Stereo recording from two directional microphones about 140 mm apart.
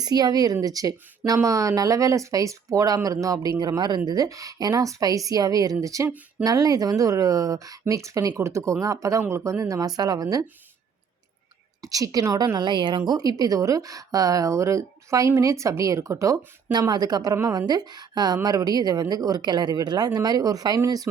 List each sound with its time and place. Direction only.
0.0 s speech: 30° right (ahead or behind)
11.8 s a woman's voice: 25° right (ahead or behind)